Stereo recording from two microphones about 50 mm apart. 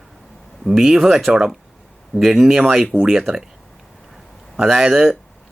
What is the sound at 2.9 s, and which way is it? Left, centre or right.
Speech, right.